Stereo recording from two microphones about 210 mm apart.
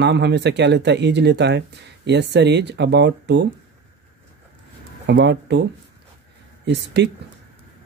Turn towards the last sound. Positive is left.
turn(degrees=-55)  # may be behind; listen again after turning